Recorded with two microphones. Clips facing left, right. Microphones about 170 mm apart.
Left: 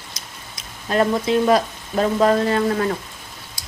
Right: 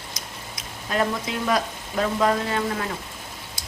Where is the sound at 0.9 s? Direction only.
35° left (ahead or behind).